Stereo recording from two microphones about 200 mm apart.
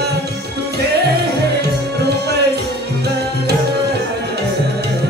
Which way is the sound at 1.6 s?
55° right (ahead or behind).